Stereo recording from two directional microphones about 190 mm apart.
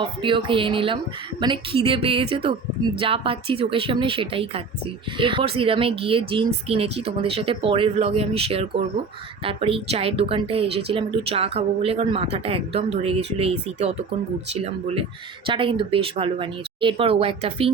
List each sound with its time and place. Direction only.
0.0 s speech: 25° right (ahead or behind)